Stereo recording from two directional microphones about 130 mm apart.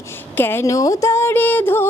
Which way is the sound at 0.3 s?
15° left (ahead or behind).